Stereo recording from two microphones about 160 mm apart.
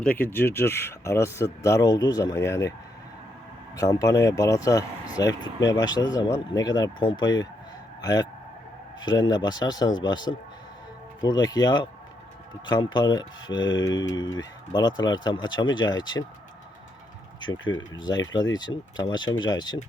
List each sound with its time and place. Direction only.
0.0 s speech: 10° left (ahead or behind)
3.8 s speech: 20° left (ahead or behind)
17.4 s speech: 30° left (ahead or behind)